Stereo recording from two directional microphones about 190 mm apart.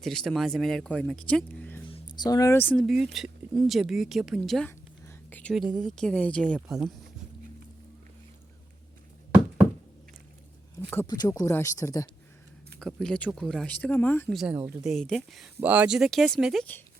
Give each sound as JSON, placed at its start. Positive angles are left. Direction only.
{"t": 0.0, "sound": "speech", "side_deg": 0}
{"t": 1.9, "sound": "speech", "side_deg": 25}
{"t": 2.8, "sound": "speech", "side_deg": 0}
{"t": 11.0, "sound": "speech", "side_deg": 20}
{"t": 12.8, "sound": "speech", "side_deg": 5}
{"t": 14.3, "sound": "speech", "side_deg": -5}